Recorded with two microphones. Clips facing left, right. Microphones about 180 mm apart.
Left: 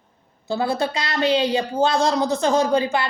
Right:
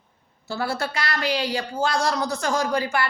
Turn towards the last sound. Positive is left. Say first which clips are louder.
# left 5 dB
turn(degrees=20)  # may be behind; listen again after turning